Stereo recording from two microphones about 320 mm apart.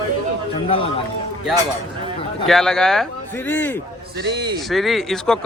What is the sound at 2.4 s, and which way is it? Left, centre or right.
Speech, centre.